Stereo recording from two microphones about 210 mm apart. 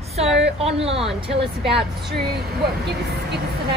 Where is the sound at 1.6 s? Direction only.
Centre (ahead or behind).